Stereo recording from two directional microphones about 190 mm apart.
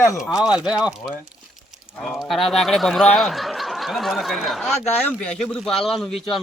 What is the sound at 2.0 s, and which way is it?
Speech, centre (ahead or behind).